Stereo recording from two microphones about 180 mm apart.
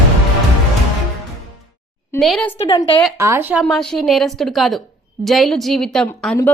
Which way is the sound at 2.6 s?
30° left (ahead or behind).